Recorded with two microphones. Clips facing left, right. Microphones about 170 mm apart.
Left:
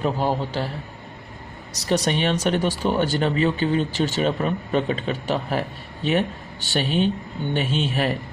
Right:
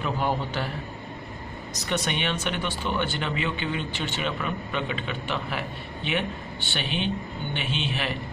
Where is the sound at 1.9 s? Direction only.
35° left (ahead or behind).